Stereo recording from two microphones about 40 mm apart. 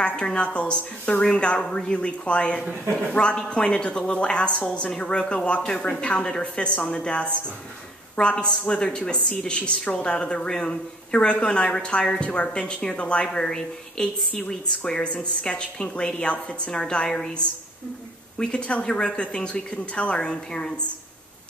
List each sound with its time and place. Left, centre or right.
0.0 s a woman's voice: left
4.9 s a woman's voice: left
10.0 s a woman's voice: left
18.4 s a woman's voice: left